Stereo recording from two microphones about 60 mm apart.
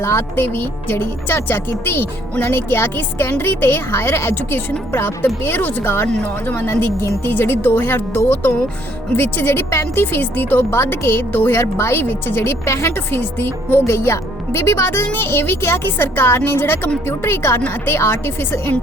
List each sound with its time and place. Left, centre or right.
0.0 s a woman's voice: left